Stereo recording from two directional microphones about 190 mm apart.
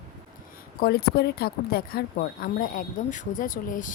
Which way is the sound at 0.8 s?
55° left (ahead or behind).